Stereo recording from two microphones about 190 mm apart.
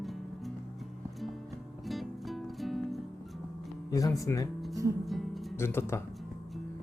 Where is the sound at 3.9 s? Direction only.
15° left (ahead or behind).